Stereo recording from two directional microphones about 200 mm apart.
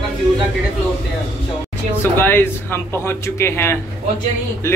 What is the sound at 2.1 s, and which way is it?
Speech, 10° left (ahead or behind).